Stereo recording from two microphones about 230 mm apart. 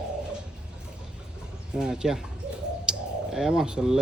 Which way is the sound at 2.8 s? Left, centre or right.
Centre.